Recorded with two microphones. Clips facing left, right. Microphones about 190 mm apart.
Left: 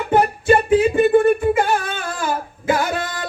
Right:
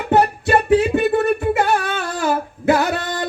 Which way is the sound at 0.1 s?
70° right (ahead or behind).